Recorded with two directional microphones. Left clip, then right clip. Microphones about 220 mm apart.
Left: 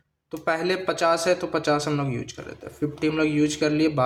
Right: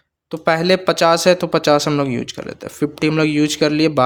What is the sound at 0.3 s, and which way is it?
Speech, 45° right (ahead or behind).